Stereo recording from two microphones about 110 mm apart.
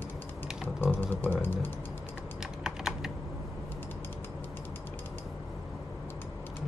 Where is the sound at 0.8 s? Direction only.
20° left (ahead or behind).